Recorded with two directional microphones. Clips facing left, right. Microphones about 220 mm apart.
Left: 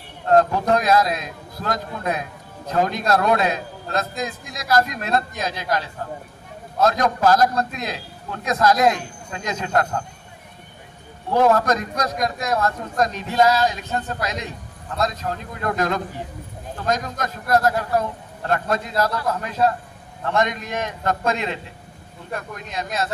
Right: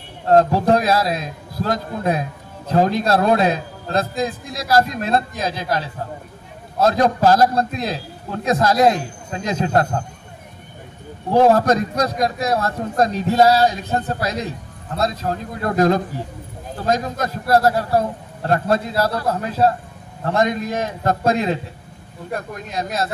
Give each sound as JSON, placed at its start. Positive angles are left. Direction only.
{"t": 0.3, "sound": "a man's voice", "side_deg": -30}
{"t": 11.3, "sound": "a man's voice", "side_deg": -30}